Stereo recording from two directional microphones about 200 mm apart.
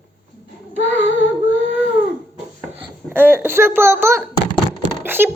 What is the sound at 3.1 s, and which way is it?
A child's voice, 10° right (ahead or behind).